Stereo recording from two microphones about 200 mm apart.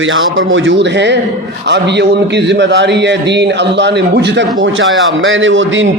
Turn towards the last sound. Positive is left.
turn(degrees=-70)  # may be behind; listen again after turning